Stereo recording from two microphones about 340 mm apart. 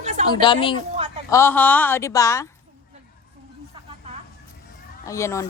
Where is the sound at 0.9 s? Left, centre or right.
Centre.